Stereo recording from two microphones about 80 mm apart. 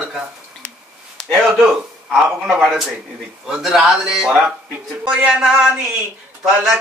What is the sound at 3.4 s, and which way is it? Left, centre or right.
Speech, centre.